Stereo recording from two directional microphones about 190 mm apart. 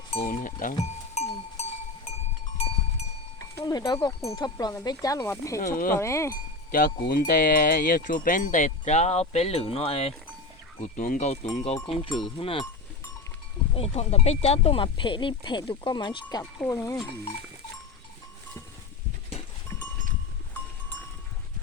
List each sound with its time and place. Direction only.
0.3 s speech: 45° left (ahead or behind)
1.1 s cowbell: 35° left (ahead or behind)
3.3 s speech: 20° left (ahead or behind)
6.3 s speech: 45° left (ahead or behind); by 12.6 s 30° left (ahead or behind)
13.7 s speech: 35° left (ahead or behind)